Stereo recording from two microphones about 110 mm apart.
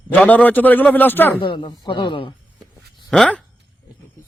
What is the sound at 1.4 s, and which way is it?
Speech, 50° left (ahead or behind).